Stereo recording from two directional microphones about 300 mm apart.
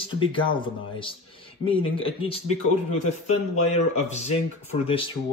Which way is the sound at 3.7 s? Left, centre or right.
Left.